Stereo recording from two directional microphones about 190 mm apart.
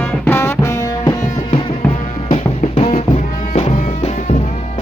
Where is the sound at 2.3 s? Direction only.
30° left (ahead or behind).